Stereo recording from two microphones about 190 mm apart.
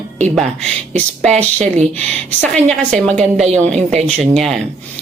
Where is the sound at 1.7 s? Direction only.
35° right (ahead or behind).